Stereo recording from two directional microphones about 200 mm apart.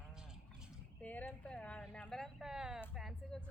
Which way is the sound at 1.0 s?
5° left (ahead or behind).